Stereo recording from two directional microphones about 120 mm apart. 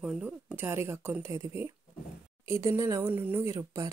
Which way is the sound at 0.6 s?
20° right (ahead or behind).